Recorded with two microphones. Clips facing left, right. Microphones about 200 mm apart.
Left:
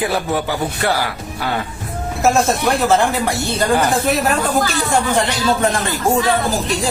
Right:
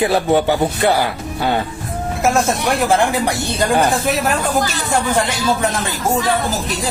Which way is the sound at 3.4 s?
15° right (ahead or behind).